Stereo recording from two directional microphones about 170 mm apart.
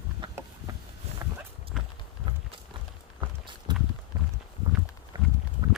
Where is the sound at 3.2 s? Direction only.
25° right (ahead or behind).